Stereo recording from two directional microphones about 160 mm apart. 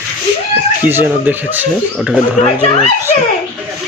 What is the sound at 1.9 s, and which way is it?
Speech, centre (ahead or behind).